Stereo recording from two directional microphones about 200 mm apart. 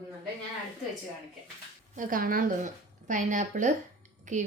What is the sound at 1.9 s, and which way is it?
A woman's voice, 45° right (ahead or behind).